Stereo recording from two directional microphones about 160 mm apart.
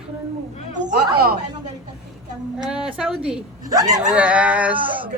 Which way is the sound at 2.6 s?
5° right (ahead or behind).